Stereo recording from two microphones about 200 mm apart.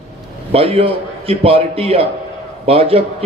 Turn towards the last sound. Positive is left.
turn(degrees=-30)  # may be behind; listen again after turning